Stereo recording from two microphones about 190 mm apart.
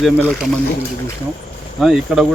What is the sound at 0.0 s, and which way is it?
Speech, centre (ahead or behind).